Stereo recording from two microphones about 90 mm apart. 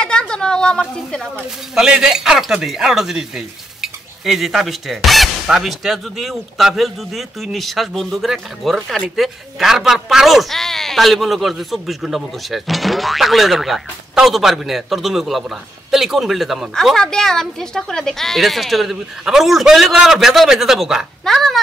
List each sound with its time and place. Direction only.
0.0 s a woman's voice: 10° left (ahead or behind)
1.8 s speech: 5° right (ahead or behind)